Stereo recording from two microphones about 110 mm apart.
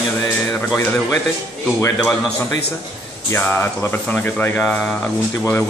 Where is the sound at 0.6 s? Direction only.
20° left (ahead or behind).